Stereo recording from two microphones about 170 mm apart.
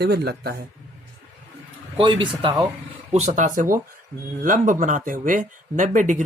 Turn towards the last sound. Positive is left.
turn(degrees=-45)  # may be behind; listen again after turning